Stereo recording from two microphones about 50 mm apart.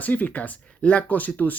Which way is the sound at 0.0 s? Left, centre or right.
Left.